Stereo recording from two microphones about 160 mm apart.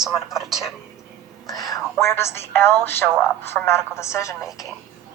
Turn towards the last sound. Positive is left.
turn(degrees=20)  # may be behind; listen again after turning